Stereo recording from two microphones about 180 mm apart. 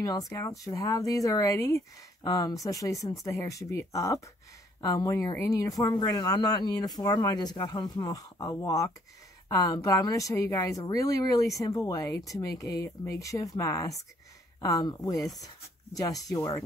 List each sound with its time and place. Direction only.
0.0 s speech: 15° left (ahead or behind)